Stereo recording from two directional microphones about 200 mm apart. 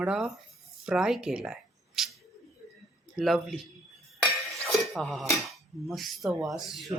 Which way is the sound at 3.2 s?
Centre (ahead or behind).